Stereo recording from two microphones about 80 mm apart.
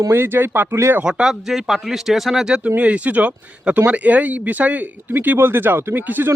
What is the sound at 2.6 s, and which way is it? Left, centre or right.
Speech, centre.